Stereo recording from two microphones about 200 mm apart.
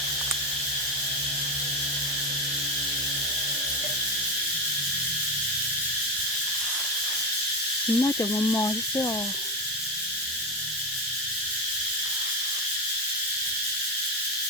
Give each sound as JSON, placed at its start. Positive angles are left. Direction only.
{"t": 7.9, "sound": "speech", "side_deg": 15}